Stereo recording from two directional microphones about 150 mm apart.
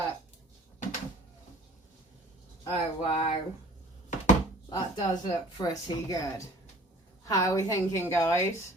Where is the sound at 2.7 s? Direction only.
40° left (ahead or behind).